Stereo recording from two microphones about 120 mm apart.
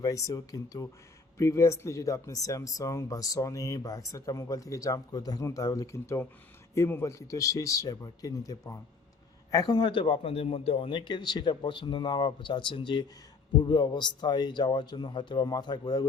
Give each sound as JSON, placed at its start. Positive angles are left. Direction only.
{"t": 0.0, "sound": "a man's voice", "side_deg": 30}